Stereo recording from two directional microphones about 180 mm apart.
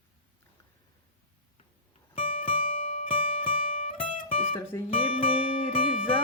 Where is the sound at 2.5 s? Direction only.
50° left (ahead or behind).